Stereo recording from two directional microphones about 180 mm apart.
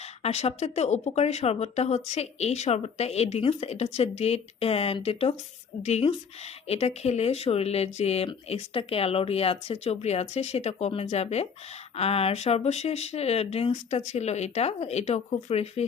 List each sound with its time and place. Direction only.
0.2 s speech: 35° left (ahead or behind)